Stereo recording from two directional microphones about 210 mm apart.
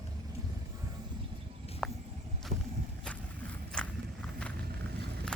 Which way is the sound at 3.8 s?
5° left (ahead or behind).